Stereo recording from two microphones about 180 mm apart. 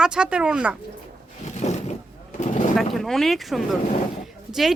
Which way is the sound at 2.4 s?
45° left (ahead or behind).